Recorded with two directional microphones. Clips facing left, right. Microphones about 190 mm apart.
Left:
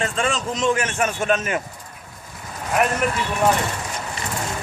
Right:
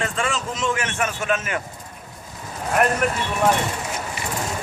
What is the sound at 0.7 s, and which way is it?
Speech, 30° left (ahead or behind).